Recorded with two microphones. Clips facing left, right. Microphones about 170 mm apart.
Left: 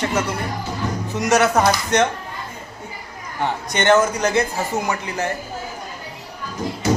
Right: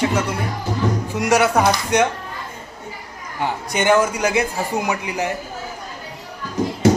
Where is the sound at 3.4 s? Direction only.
5° right (ahead or behind).